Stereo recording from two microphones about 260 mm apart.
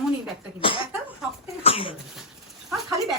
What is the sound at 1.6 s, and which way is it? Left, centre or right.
Cough, left.